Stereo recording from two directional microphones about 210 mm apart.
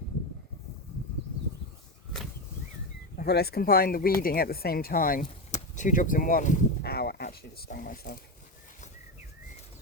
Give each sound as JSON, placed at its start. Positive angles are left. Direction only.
{"t": 3.2, "sound": "speech", "side_deg": 50}